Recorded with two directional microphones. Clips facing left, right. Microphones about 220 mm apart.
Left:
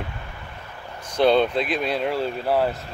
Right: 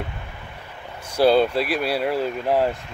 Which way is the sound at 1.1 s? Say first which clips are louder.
Right 1 dB; 5° right (ahead or behind).